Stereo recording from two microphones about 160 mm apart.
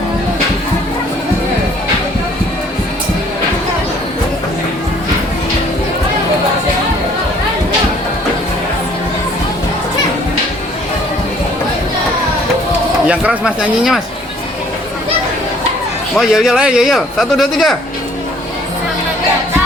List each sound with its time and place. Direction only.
13.1 s speech: 5° right (ahead or behind)
16.1 s speech: 5° right (ahead or behind)